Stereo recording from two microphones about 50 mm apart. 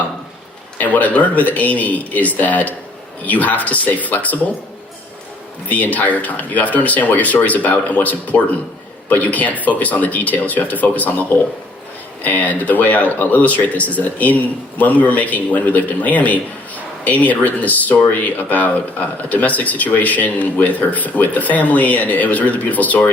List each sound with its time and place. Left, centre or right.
0.8 s a man's voice: left
5.6 s a man's voice: left